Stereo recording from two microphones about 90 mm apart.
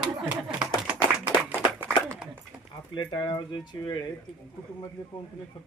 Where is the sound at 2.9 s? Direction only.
55° left (ahead or behind).